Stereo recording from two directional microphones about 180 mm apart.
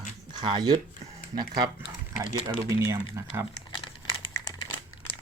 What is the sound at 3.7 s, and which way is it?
Crumpling, 25° left (ahead or behind).